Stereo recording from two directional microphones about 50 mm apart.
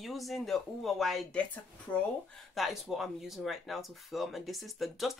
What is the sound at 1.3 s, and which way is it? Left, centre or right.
Speech, left.